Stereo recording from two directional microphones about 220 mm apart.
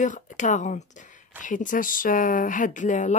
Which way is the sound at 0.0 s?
35° left (ahead or behind).